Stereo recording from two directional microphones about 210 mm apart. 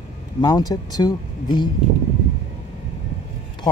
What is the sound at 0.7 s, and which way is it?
A woman's voice, 20° left (ahead or behind).